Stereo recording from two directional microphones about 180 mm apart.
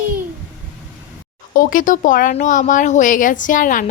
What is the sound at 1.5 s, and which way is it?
A woman's voice, 50° left (ahead or behind).